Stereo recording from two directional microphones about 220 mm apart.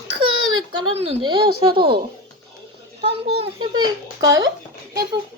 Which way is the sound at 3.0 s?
25° right (ahead or behind).